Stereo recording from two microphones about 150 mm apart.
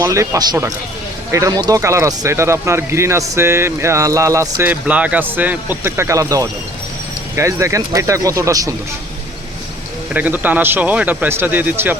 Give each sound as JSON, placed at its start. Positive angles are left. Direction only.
{"t": 0.0, "sound": "speech", "side_deg": -25}
{"t": 10.2, "sound": "speech", "side_deg": -10}